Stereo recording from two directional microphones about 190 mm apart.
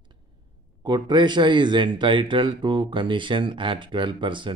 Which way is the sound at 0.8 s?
25° right (ahead or behind).